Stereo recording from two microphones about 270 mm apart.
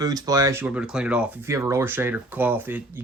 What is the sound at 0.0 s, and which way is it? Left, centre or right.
Speech, centre.